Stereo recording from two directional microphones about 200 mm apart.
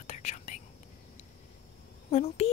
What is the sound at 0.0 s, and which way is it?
Whispering, 35° left (ahead or behind).